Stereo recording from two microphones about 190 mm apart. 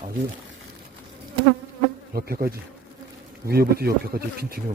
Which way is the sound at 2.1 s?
55° right (ahead or behind).